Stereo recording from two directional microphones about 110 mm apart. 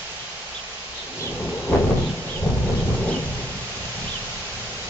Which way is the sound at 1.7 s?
20° left (ahead or behind).